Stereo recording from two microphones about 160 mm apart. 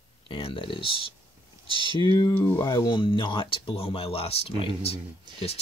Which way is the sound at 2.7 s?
30° left (ahead or behind).